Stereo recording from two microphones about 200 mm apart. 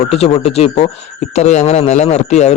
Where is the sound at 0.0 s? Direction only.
30° left (ahead or behind).